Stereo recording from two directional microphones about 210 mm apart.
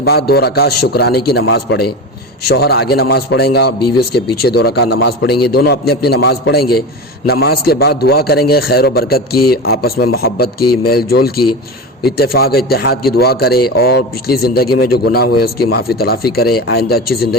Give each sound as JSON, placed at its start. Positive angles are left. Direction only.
{"t": 0.0, "sound": "a man's voice", "side_deg": 50}